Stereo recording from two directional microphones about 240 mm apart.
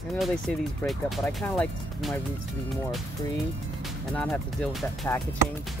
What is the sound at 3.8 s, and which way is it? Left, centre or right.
Speech, centre.